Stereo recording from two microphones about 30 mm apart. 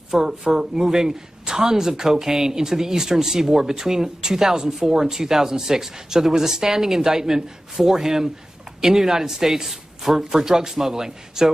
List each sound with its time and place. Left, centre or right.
0.1 s speech: centre